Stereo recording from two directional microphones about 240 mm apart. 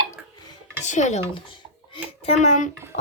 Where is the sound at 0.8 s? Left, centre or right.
Left.